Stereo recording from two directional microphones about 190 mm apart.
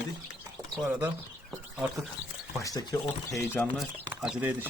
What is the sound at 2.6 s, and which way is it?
Speech, 20° left (ahead or behind).